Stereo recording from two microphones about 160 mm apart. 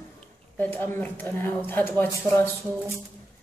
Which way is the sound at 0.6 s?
10° left (ahead or behind).